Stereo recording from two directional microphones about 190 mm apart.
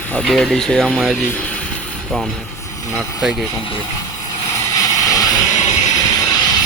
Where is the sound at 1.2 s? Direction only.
10° left (ahead or behind).